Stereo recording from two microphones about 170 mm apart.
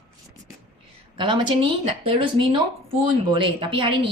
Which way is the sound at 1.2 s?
30° right (ahead or behind).